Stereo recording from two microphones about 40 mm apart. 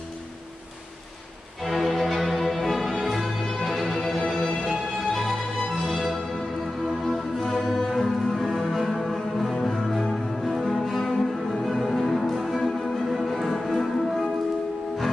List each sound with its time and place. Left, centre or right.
1.6 s music: centre